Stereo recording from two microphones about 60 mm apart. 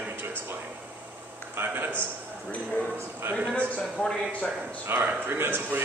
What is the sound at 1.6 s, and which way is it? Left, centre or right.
Speech, right.